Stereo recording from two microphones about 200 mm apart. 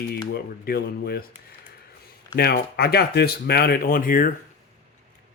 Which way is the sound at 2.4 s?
50° left (ahead or behind).